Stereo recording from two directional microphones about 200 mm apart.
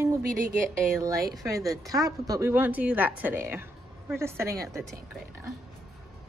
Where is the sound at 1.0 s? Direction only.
15° right (ahead or behind).